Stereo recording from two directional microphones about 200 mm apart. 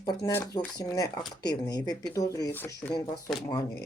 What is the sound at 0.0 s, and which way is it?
Speech, 15° left (ahead or behind).